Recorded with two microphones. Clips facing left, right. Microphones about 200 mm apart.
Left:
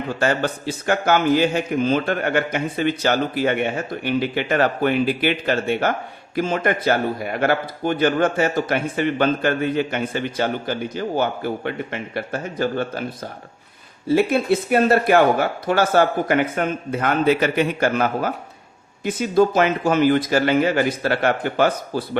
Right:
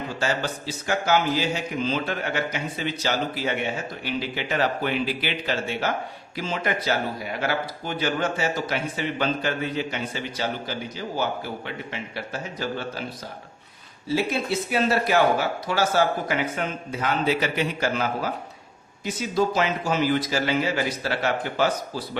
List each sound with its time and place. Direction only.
0.2 s speech: 55° left (ahead or behind)
14.1 s speech: 55° left (ahead or behind)